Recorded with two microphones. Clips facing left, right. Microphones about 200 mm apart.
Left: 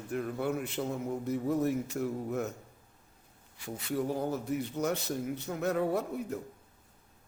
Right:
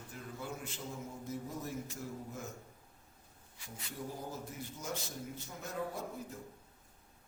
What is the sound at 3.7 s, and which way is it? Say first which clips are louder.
A man's voice: left 12 dB; 70° left (ahead or behind).